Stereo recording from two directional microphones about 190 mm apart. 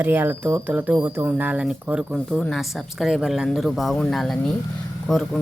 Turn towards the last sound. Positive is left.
turn(degrees=0)  # may be behind; listen again after turning